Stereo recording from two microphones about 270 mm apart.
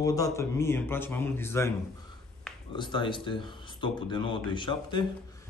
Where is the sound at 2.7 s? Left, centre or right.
Centre.